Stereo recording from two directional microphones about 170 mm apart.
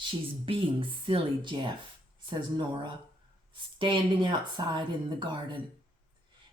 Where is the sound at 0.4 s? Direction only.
30° right (ahead or behind).